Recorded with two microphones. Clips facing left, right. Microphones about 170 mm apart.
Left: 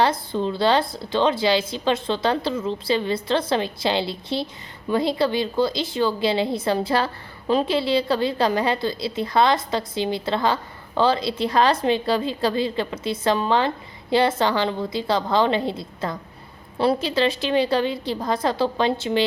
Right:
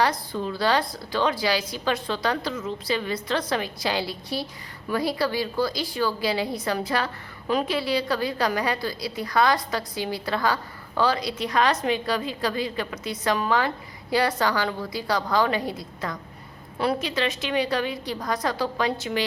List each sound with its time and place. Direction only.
0.0 s a woman's voice: 25° left (ahead or behind)